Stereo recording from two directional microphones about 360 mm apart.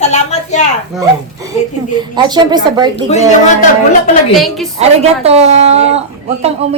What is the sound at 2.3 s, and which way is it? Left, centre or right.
Speech, centre.